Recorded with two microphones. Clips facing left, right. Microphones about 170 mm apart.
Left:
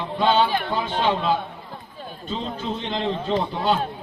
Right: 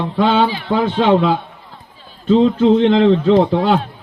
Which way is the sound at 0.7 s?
65° right (ahead or behind).